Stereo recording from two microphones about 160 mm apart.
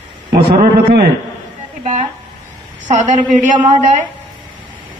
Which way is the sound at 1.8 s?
45° right (ahead or behind).